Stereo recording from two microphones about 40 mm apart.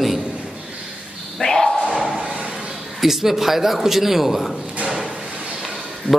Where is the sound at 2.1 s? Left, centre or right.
Centre.